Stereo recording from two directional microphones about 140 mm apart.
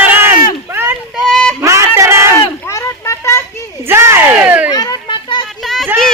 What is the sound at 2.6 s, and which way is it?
Children playing, 20° left (ahead or behind).